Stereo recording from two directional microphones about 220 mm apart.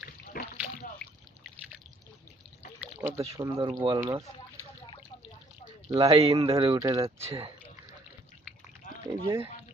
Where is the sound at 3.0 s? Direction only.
10° right (ahead or behind).